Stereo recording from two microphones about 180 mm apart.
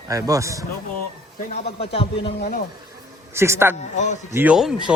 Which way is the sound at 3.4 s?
15° right (ahead or behind).